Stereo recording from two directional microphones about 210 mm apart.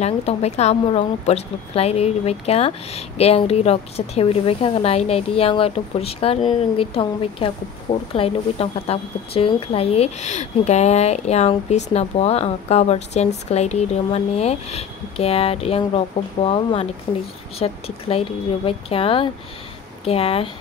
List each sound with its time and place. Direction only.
0.0 s a woman's voice: 30° left (ahead or behind)
17.1 s speech: 15° left (ahead or behind)
17.6 s a woman's voice: 30° left (ahead or behind)